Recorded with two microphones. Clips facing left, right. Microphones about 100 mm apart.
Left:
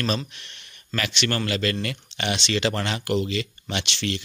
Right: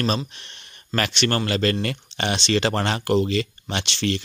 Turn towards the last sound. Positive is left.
turn(degrees=-40)  # may be behind; listen again after turning